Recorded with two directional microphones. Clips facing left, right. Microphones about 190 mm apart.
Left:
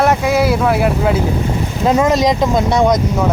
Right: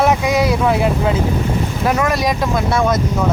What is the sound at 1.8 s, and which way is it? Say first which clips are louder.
Speech: left 5 dB; 20° left (ahead or behind).